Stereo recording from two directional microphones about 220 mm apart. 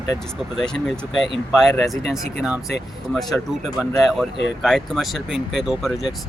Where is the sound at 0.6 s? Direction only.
Centre (ahead or behind).